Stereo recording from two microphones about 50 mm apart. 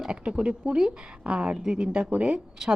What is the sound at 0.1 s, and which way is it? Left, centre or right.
A woman's voice, centre.